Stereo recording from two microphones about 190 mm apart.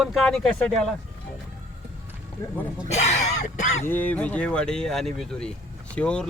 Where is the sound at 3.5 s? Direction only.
40° left (ahead or behind).